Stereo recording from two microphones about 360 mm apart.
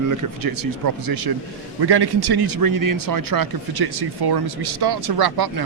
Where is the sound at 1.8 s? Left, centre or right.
Right.